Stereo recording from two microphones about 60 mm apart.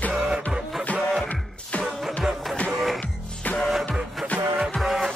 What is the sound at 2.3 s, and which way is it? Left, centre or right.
Music, centre.